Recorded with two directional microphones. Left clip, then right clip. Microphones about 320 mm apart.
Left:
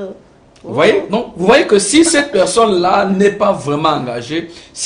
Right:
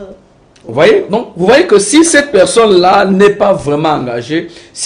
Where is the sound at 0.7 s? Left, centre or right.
Centre.